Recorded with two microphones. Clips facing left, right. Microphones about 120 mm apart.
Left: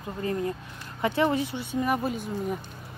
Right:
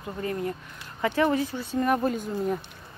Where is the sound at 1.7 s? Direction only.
5° left (ahead or behind).